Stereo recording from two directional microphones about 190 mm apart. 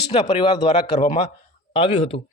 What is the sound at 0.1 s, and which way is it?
Speech, 25° left (ahead or behind).